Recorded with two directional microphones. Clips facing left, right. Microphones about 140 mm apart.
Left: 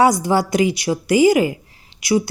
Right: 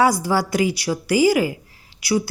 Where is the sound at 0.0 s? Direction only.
20° left (ahead or behind).